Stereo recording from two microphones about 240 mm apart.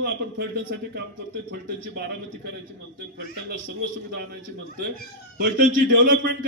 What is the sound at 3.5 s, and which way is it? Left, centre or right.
A man's voice, right.